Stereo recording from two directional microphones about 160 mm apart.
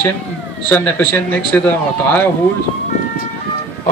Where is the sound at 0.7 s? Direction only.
10° left (ahead or behind).